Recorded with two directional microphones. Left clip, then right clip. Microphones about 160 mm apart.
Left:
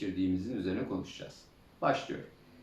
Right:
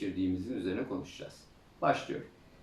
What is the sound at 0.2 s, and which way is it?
Speech, 5° left (ahead or behind).